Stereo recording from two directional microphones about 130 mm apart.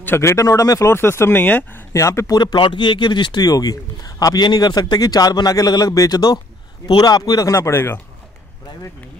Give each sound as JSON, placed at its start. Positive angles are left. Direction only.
{"t": 0.0, "sound": "speech", "side_deg": 20}